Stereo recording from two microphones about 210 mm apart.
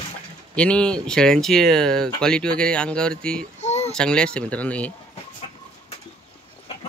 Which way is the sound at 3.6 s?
30° left (ahead or behind).